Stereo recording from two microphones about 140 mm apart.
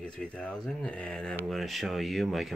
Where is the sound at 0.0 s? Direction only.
5° left (ahead or behind).